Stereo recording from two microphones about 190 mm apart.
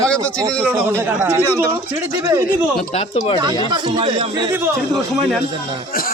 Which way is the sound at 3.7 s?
25° right (ahead or behind).